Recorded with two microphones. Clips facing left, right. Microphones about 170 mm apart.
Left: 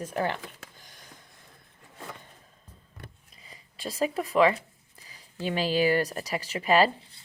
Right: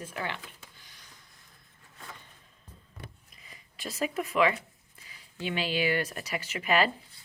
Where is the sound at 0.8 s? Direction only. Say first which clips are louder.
Left 5 dB; 45° left (ahead or behind).